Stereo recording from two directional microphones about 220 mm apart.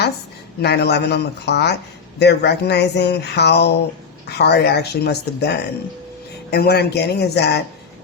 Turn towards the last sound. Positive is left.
turn(degrees=50)  # may be behind; listen again after turning